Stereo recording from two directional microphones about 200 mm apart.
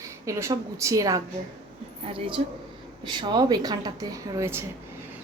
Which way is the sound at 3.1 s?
20° right (ahead or behind).